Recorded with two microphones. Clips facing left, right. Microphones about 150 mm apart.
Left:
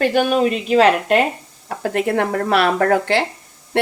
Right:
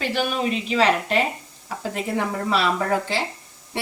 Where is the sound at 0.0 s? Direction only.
50° left (ahead or behind).